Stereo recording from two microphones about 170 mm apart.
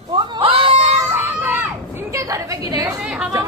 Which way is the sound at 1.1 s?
10° right (ahead or behind).